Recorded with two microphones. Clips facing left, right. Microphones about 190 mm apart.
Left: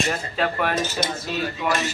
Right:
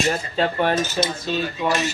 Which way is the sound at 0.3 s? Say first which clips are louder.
Right 3 dB; 30° right (ahead or behind).